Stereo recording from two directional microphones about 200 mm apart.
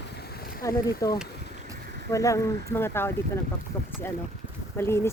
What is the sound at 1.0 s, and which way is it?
Speech, 15° left (ahead or behind).